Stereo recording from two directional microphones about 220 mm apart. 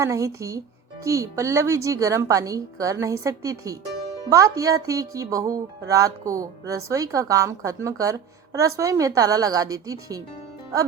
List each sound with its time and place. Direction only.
0.0 s a woman's voice: 15° right (ahead or behind)